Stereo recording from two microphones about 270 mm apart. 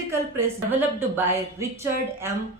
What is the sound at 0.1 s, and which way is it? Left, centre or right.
A woman's voice, centre.